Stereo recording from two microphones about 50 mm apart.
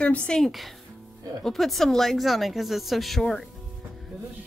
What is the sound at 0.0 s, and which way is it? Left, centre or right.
Speech, left.